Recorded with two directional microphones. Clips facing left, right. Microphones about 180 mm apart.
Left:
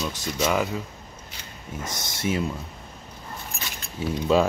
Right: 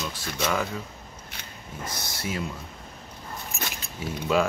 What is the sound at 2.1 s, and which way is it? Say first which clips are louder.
Speech: left 7 dB; 25° left (ahead or behind).